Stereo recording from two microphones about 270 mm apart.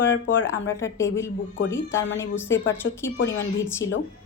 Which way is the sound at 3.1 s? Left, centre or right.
Left.